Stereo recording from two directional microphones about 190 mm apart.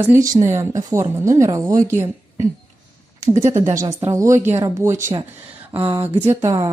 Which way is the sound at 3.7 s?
15° right (ahead or behind).